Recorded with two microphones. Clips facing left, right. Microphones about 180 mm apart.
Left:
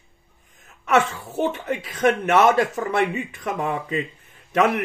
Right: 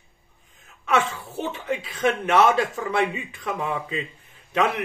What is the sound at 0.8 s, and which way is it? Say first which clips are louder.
Speech: left 3 dB; 45° left (ahead or behind).